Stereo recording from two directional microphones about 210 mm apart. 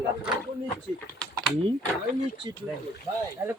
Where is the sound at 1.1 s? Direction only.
5° left (ahead or behind).